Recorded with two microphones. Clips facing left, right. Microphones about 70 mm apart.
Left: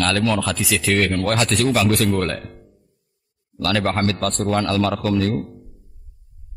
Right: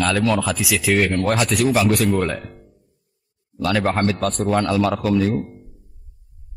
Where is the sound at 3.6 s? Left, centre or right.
Centre.